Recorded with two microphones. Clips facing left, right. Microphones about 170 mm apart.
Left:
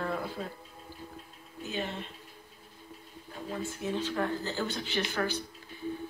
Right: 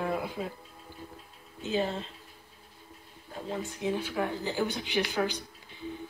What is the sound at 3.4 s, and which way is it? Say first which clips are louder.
A woman's voice: right 2 dB; 15° right (ahead or behind).